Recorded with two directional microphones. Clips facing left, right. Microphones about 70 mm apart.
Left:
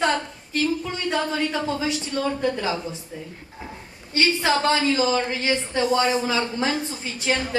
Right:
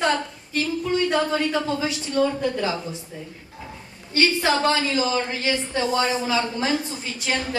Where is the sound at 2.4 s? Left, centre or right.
Left.